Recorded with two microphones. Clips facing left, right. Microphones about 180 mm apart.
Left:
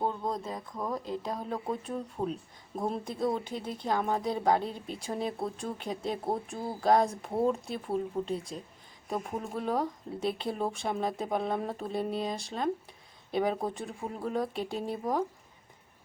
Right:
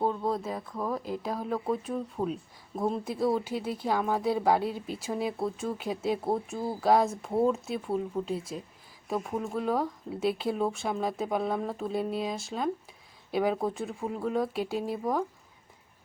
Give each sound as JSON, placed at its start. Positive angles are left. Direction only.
{"t": 0.0, "sound": "speech", "side_deg": -5}